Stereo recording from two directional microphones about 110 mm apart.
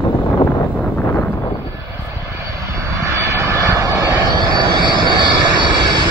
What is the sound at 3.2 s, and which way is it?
Vehicle, 25° right (ahead or behind).